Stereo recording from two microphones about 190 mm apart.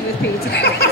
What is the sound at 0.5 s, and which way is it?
Speech, 55° left (ahead or behind).